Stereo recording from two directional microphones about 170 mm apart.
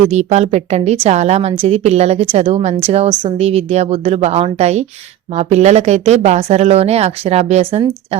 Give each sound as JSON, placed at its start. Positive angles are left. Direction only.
{"t": 0.1, "sound": "speech", "side_deg": -40}